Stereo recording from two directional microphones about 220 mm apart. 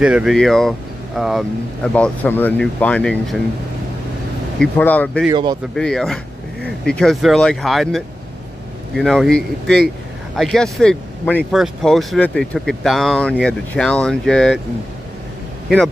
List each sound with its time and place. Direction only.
0.0 s speech: 5° right (ahead or behind)
4.6 s speech: 5° left (ahead or behind)
5.3 s speech: 20° right (ahead or behind)
5.8 s speech: 5° left (ahead or behind)